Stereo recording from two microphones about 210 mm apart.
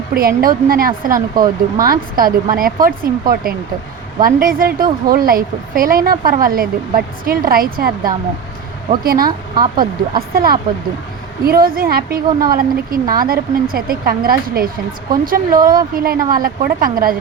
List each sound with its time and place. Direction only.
0.1 s a woman's voice: 45° right (ahead or behind)